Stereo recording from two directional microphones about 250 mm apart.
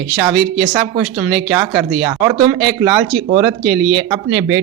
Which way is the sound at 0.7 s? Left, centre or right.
Centre.